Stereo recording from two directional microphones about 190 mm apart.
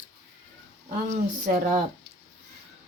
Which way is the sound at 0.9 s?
35° right (ahead or behind).